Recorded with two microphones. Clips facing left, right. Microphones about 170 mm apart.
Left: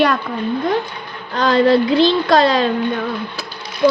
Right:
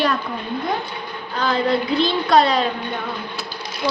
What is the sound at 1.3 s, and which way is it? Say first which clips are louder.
Speech: left 7 dB; 90° left.